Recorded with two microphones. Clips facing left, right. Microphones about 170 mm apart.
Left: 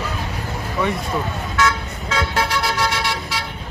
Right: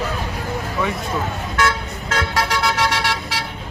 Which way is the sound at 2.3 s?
75° right (ahead or behind).